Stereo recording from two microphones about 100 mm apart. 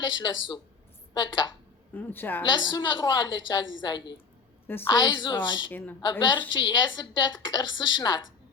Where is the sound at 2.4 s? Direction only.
50° left (ahead or behind).